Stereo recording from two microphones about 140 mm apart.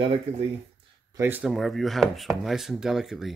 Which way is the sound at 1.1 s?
15° right (ahead or behind).